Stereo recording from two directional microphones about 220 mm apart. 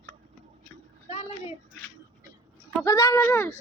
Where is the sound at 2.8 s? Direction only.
15° left (ahead or behind).